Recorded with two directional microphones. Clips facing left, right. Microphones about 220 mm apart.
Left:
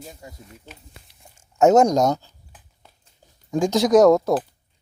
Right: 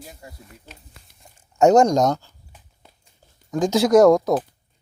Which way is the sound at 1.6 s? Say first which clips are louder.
Even; centre (ahead or behind).